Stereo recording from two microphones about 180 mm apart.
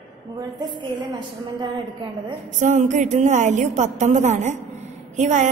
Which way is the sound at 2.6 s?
40° right (ahead or behind).